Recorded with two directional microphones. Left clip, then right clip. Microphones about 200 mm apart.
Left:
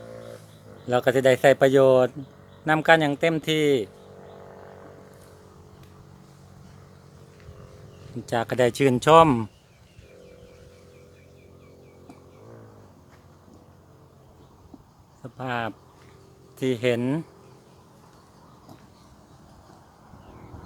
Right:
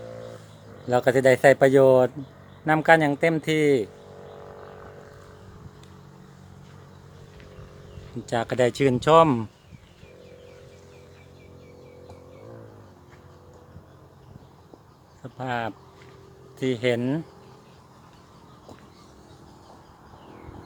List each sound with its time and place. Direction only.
0.9 s speech: 5° left (ahead or behind)
8.3 s speech: 20° left (ahead or behind)
15.2 s a sound: 20° left (ahead or behind)
16.6 s speech: 30° left (ahead or behind)